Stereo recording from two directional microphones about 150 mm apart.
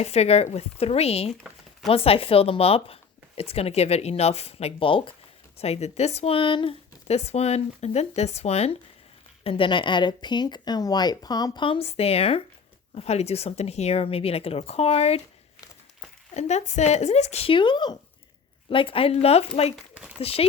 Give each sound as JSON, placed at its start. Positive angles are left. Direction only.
{"t": 0.0, "sound": "speech", "side_deg": 45}
{"t": 1.3, "sound": "chopping", "side_deg": 0}
{"t": 1.9, "sound": "speech", "side_deg": 40}
{"t": 16.3, "sound": "speech", "side_deg": 50}
{"t": 19.7, "sound": "a sound", "side_deg": -5}
{"t": 20.1, "sound": "speech", "side_deg": 40}